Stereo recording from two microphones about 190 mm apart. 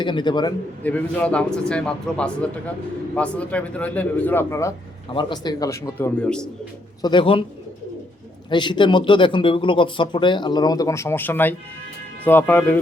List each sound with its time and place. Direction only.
0.0 s speech: 25° left (ahead or behind)
0.8 s a man's voice: 10° left (ahead or behind)
6.2 s a man's voice: 5° left (ahead or behind)
7.0 s speech: 25° left (ahead or behind)
8.4 s a man's voice: 25° left (ahead or behind)